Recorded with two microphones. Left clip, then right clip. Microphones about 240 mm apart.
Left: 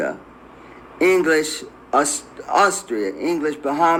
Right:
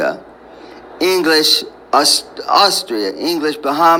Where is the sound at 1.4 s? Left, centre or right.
Centre.